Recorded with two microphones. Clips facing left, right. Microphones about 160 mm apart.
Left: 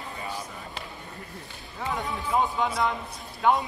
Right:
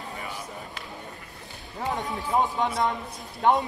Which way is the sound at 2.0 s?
40° right (ahead or behind).